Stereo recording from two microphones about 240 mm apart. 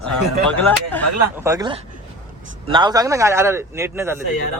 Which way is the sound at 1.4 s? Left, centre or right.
Centre.